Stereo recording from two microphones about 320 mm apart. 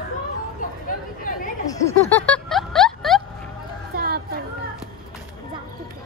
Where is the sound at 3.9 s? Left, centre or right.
Right.